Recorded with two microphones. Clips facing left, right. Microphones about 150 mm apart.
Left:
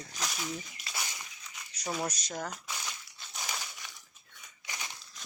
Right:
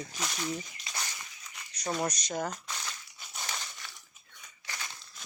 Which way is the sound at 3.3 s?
5° left (ahead or behind).